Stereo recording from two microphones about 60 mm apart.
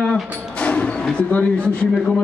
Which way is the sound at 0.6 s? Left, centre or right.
Left.